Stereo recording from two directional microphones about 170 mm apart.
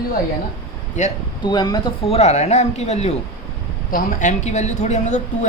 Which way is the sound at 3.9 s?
55° left (ahead or behind).